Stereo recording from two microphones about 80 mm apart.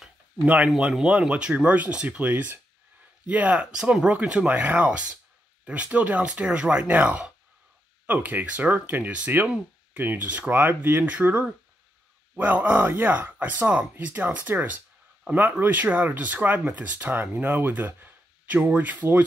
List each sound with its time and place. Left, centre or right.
0.7 s speech: centre